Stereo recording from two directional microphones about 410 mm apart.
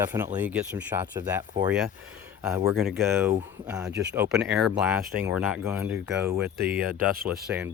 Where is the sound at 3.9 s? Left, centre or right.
Right.